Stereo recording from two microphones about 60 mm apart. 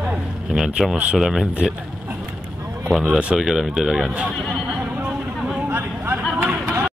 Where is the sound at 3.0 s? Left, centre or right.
Centre.